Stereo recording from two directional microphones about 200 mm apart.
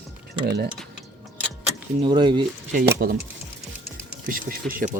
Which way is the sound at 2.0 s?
25° right (ahead or behind).